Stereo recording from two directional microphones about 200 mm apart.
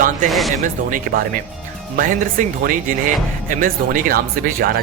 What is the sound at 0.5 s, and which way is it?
Speech, 40° right (ahead or behind).